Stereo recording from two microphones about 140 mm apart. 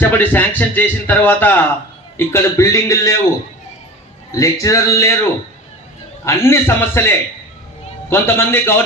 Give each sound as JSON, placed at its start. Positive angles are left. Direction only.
{"t": 0.0, "sound": "a man's voice", "side_deg": 15}
{"t": 4.3, "sound": "a man's voice", "side_deg": 25}
{"t": 6.2, "sound": "a man's voice", "side_deg": 20}